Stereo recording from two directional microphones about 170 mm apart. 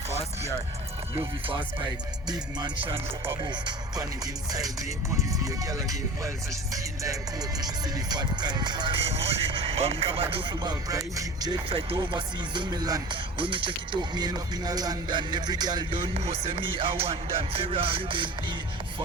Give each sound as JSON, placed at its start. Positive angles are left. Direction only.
{"t": 1.1, "sound": "speech", "side_deg": -30}